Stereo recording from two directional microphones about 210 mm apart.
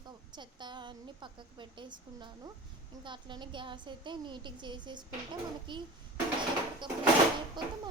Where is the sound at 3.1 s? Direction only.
20° right (ahead or behind).